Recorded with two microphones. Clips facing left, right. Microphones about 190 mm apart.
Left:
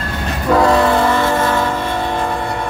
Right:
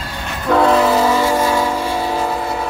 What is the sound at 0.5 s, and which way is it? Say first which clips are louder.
Train: even; centre (ahead or behind).